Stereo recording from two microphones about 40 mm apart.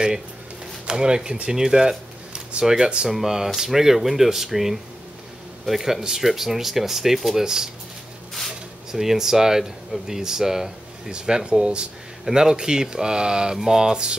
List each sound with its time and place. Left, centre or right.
0.8 s speech: right